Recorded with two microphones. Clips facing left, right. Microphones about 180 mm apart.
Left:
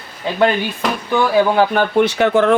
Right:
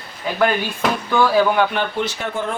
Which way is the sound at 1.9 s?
70° left (ahead or behind).